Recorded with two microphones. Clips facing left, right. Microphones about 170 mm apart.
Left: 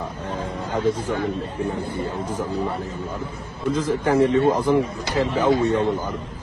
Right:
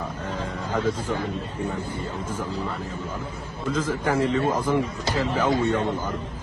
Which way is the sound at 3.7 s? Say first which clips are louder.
Left 4 dB; 25° left (ahead or behind).